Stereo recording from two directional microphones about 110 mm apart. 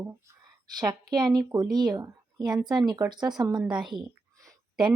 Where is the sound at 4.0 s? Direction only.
40° right (ahead or behind).